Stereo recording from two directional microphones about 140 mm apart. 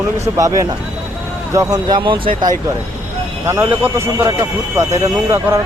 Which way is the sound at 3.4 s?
20° right (ahead or behind).